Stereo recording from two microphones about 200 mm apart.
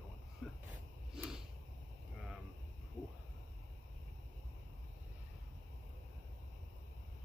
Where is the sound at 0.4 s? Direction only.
Centre (ahead or behind).